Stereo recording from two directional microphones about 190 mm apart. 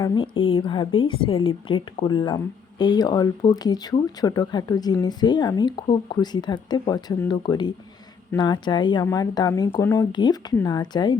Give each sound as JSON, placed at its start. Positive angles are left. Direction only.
{"t": 0.0, "sound": "a woman's voice", "side_deg": 20}